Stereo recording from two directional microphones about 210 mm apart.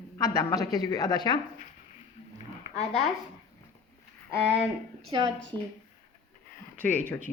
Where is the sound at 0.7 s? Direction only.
20° left (ahead or behind).